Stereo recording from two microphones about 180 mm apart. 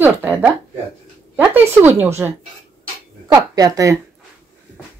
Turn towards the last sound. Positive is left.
turn(degrees=-20)  # may be behind; listen again after turning